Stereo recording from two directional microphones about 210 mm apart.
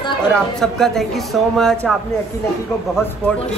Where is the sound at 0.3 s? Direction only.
Centre (ahead or behind).